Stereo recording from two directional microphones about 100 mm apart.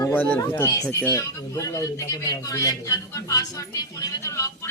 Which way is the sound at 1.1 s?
35° left (ahead or behind).